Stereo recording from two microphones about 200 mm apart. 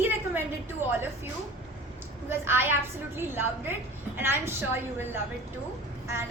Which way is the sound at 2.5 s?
10° right (ahead or behind).